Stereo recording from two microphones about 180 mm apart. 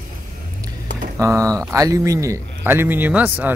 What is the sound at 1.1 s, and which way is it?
Speech, 15° right (ahead or behind).